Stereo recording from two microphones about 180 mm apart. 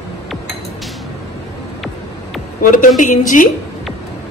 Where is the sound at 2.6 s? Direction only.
50° left (ahead or behind).